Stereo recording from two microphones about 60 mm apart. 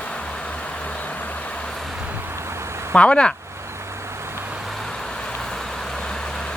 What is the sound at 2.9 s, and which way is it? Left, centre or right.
Speech, centre.